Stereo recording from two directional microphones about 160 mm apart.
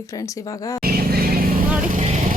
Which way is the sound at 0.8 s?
70° right (ahead or behind).